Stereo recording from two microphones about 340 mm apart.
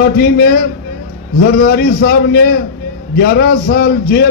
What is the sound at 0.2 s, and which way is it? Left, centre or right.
A man's voice, left.